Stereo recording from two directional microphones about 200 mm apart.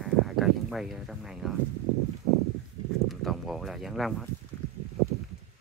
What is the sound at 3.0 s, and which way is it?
Speech, centre (ahead or behind).